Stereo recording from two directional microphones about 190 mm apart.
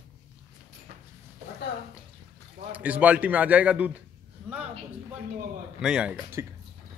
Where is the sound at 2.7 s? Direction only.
10° right (ahead or behind).